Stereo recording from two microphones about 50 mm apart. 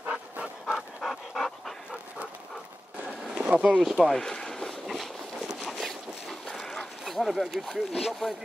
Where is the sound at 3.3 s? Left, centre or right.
Right.